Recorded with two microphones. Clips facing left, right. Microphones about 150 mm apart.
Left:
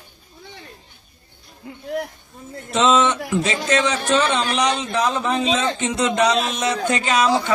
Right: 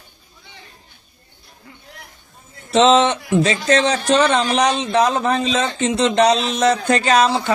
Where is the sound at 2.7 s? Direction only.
35° right (ahead or behind).